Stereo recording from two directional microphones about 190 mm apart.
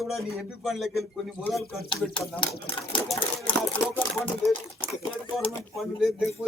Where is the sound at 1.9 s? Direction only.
25° left (ahead or behind).